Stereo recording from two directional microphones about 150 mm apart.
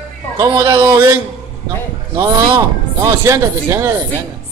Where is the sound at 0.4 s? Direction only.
20° right (ahead or behind).